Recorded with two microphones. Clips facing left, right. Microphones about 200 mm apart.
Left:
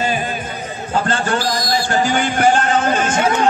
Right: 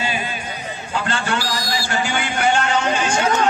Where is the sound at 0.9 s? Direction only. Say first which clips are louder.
Left 4 dB; 40° left (ahead or behind).